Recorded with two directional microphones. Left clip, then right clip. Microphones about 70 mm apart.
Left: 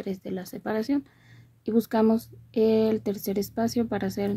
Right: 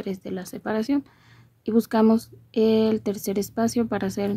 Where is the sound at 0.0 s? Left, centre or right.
Right.